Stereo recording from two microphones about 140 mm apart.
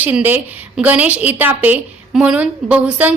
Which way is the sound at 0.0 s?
10° right (ahead or behind).